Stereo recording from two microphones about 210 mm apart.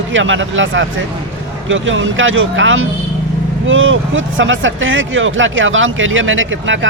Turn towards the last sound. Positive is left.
turn(degrees=-65)  # may be behind; listen again after turning